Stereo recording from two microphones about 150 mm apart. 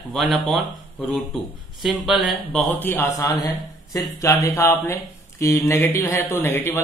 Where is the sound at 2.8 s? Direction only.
15° left (ahead or behind).